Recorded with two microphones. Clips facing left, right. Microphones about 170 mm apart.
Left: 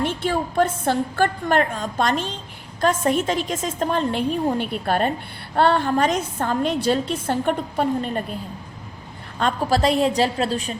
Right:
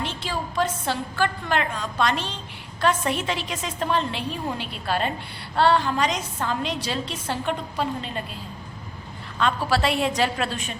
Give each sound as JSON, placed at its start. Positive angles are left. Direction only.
{"t": 0.0, "sound": "a woman's voice", "side_deg": 55}
{"t": 9.4, "sound": "a woman's voice", "side_deg": 45}